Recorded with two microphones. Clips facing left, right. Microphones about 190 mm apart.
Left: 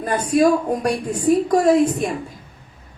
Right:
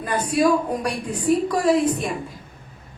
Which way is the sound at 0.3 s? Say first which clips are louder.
Left 3 dB; 45° left (ahead or behind).